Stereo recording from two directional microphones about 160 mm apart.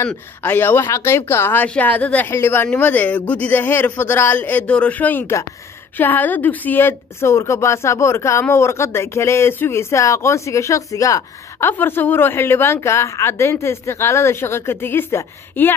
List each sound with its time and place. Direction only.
0.1 s a woman's voice: 10° left (ahead or behind)